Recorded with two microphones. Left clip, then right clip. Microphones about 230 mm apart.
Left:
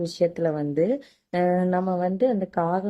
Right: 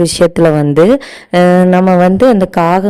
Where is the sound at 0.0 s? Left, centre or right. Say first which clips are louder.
Right 15 dB; right.